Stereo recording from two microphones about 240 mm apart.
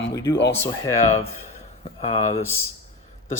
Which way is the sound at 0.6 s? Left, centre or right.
Centre.